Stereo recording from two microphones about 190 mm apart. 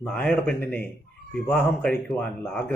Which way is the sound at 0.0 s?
5° left (ahead or behind).